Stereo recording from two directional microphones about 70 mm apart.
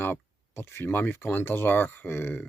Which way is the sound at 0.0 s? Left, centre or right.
Left.